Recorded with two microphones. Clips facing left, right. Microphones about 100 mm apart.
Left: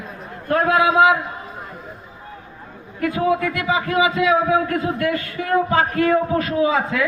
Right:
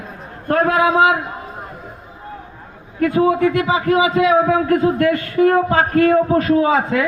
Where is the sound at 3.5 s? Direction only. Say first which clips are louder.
Right 5 dB; 45° right (ahead or behind).